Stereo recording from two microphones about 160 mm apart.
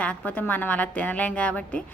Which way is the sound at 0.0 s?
10° left (ahead or behind).